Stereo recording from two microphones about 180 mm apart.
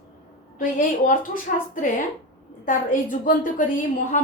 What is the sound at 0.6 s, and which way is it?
A woman's voice, 50° left (ahead or behind).